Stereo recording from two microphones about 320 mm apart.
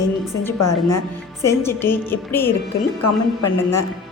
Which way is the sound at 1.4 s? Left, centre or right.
Centre.